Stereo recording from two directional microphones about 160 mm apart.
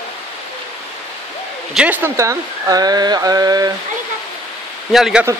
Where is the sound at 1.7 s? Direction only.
10° right (ahead or behind).